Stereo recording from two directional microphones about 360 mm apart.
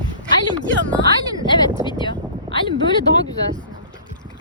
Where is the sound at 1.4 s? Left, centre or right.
Centre.